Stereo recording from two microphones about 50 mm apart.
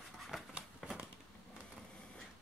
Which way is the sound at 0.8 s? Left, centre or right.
Centre.